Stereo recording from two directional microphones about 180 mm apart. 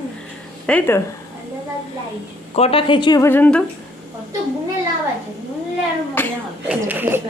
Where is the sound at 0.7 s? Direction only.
15° left (ahead or behind).